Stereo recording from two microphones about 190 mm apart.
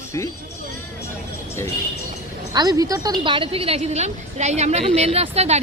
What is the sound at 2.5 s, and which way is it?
A woman's voice, 20° right (ahead or behind).